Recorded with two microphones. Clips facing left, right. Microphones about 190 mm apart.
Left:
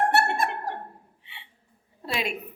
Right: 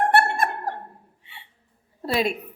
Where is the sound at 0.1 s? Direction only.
55° right (ahead or behind).